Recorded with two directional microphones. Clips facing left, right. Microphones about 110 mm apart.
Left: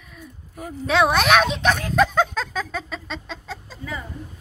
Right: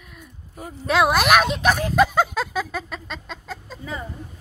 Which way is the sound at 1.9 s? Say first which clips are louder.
Right 1 dB; 5° right (ahead or behind).